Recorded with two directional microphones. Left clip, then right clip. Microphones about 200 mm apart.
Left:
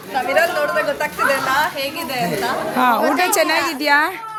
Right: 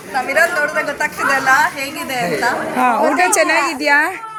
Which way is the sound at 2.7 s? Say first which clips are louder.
Right 1 dB; centre (ahead or behind).